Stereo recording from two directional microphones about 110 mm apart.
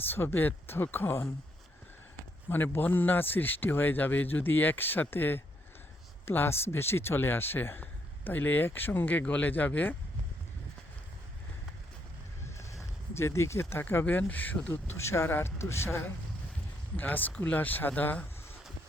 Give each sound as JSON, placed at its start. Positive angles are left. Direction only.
{"t": 0.1, "sound": "speech", "side_deg": 20}
{"t": 2.5, "sound": "a man's voice", "side_deg": 20}
{"t": 12.5, "sound": "speech", "side_deg": 25}
{"t": 17.0, "sound": "a man's voice", "side_deg": 15}